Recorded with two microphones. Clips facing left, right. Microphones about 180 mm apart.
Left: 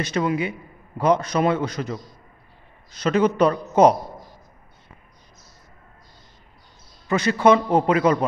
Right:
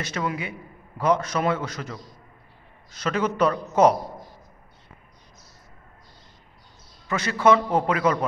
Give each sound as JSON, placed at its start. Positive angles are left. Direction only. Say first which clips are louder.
{"t": 0.0, "sound": "a man's voice", "louder": "left 6 dB", "side_deg": 25}
{"t": 3.0, "sound": "a man's voice", "louder": "left 5 dB", "side_deg": 20}
{"t": 7.2, "sound": "a man's voice", "louder": "left 3 dB", "side_deg": 20}